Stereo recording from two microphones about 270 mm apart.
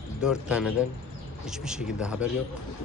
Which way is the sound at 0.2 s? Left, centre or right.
Centre.